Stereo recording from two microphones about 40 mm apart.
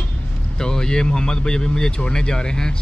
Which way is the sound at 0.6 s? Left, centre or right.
Centre.